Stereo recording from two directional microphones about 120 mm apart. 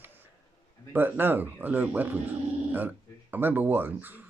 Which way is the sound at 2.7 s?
15° right (ahead or behind).